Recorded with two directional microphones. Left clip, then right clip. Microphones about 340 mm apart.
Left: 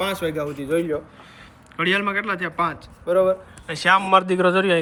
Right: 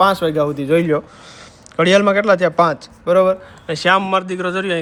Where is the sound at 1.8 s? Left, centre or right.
Centre.